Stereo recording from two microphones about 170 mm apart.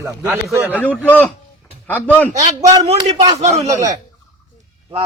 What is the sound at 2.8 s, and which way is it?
Speech, 40° right (ahead or behind).